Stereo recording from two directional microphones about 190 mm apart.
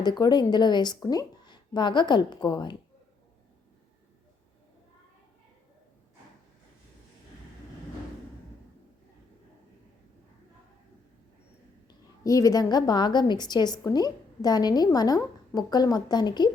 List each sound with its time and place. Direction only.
0.0 s a woman's voice: 20° left (ahead or behind)
11.9 s a woman's voice: 15° left (ahead or behind)